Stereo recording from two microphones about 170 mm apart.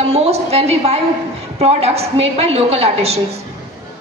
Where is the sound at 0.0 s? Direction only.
35° right (ahead or behind).